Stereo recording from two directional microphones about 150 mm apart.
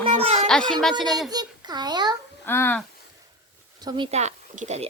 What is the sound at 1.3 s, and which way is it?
Speech, 25° right (ahead or behind).